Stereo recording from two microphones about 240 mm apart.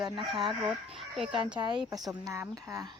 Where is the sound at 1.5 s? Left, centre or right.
Centre.